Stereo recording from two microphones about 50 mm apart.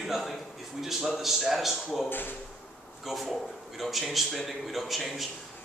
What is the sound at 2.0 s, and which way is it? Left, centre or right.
Speech, left.